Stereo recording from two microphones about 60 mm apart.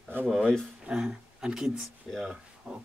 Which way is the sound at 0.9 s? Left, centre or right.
Centre.